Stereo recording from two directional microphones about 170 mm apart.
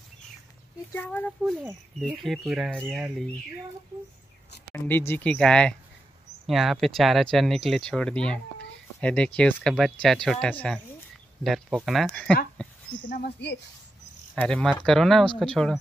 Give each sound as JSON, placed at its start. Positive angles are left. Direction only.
{"t": 0.9, "sound": "speech", "side_deg": 10}
{"t": 4.7, "sound": "speech", "side_deg": 10}
{"t": 12.6, "sound": "a sound", "side_deg": 5}
{"t": 13.1, "sound": "speech", "side_deg": 75}
{"t": 14.3, "sound": "speech", "side_deg": 5}